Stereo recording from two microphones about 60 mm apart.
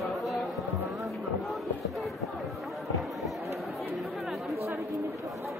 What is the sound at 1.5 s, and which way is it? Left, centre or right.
Speech, centre.